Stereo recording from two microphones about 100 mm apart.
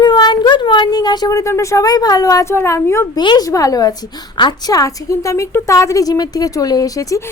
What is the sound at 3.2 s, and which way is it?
A woman's voice, 45° left (ahead or behind).